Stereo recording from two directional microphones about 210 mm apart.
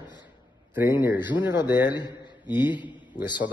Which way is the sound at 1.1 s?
20° left (ahead or behind).